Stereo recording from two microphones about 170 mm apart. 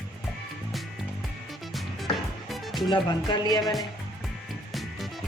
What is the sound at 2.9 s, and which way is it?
Speech, 25° left (ahead or behind).